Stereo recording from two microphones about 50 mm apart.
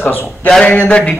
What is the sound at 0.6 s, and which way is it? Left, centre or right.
Speech, left.